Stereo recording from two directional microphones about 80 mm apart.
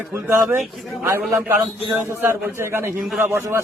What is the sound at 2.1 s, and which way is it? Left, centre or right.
A man's voice, right.